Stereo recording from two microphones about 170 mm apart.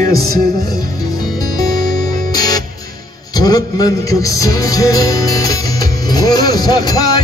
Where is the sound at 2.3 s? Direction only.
20° left (ahead or behind).